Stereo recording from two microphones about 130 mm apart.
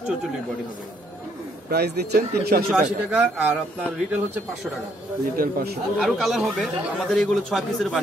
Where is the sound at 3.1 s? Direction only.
10° right (ahead or behind).